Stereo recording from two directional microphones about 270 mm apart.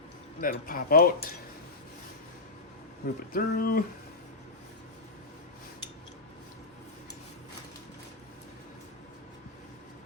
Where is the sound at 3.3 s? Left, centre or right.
Left.